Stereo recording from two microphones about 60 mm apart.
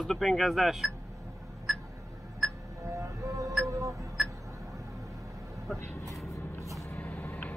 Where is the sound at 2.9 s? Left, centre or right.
Right.